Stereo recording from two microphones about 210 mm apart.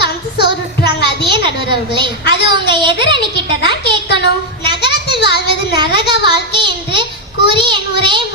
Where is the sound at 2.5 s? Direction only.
20° right (ahead or behind).